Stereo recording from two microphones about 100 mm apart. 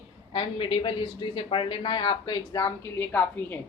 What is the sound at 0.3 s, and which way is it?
Speech, 55° left (ahead or behind).